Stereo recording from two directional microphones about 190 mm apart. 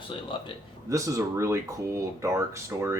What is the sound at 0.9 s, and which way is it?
Speech, 15° right (ahead or behind).